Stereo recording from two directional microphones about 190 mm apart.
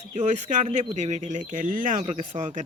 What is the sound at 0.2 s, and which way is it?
Speech, 40° right (ahead or behind).